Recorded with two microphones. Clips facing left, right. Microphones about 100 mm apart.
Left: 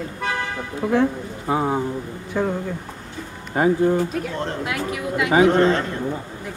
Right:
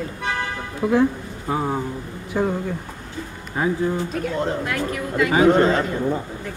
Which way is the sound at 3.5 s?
50° left (ahead or behind).